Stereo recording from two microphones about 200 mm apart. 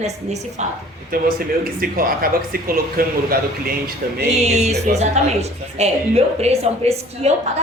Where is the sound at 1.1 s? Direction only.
45° right (ahead or behind).